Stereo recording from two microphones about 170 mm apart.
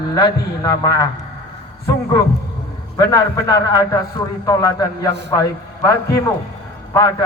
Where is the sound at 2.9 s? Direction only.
20° left (ahead or behind).